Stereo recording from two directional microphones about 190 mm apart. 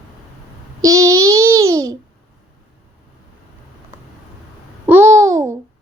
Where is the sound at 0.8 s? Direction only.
15° right (ahead or behind).